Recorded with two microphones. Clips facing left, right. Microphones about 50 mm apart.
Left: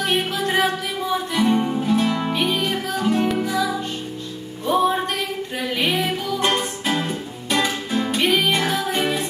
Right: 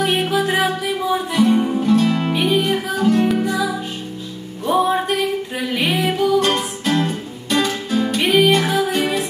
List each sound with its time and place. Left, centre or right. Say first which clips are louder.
0.0 s music: right 4 dB; centre
6.4 s music: right 2 dB; centre
8.2 s music: right 5 dB; centre